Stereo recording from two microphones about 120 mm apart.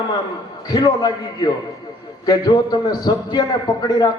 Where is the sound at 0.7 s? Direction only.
30° left (ahead or behind).